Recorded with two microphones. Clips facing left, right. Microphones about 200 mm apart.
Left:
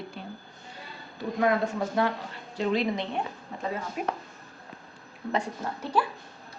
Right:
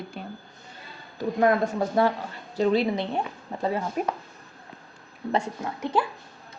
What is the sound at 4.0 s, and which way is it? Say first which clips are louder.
Speech: right 2 dB; 45° right (ahead or behind).